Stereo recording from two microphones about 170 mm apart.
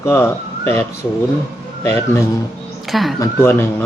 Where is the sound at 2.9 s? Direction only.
Centre (ahead or behind).